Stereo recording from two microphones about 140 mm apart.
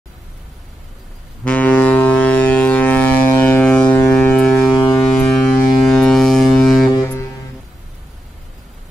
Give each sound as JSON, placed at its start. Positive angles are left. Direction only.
{"t": 1.4, "sound": "ship", "side_deg": 10}
{"t": 3.6, "sound": "siren", "side_deg": 10}
{"t": 5.9, "sound": "ship", "side_deg": 0}
{"t": 7.0, "sound": "music", "side_deg": 20}